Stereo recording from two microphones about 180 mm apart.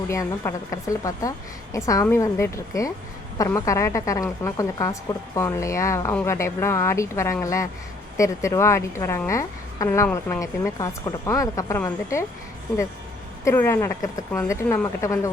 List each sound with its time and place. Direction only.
0.1 s a woman's voice: 15° left (ahead or behind)
13.4 s a woman's voice: 15° left (ahead or behind)